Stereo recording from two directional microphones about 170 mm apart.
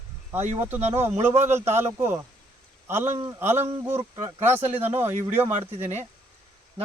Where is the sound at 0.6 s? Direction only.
10° right (ahead or behind).